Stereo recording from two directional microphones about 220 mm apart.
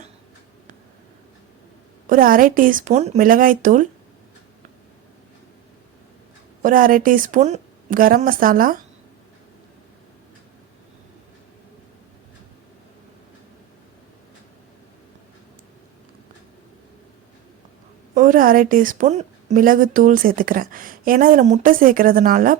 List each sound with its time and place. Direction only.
2.0 s a woman's voice: 40° right (ahead or behind)
6.6 s a woman's voice: 40° right (ahead or behind)
18.1 s a woman's voice: 35° right (ahead or behind)